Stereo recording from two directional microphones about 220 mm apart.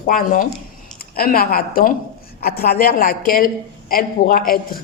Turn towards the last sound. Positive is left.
turn(degrees=40)  # may be behind; listen again after turning